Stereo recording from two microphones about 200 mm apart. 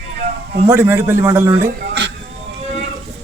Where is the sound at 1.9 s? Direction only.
60° right (ahead or behind).